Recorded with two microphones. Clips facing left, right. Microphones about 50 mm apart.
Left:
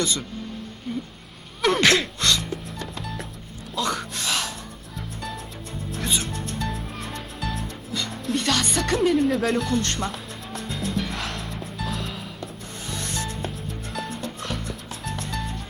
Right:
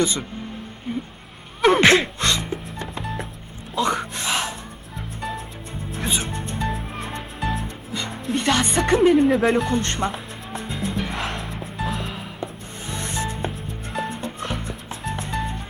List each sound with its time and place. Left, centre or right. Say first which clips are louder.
0.0 s speech: right 4 dB; right
1.6 s music: right 4 dB; right
3.8 s a sound: right 4 dB; right
6.1 s music: right 2 dB; right